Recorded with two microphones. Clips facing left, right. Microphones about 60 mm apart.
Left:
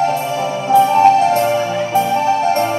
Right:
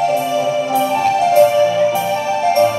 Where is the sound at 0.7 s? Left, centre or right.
Left.